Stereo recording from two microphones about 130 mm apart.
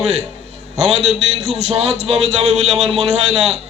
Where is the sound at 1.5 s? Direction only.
55° right (ahead or behind).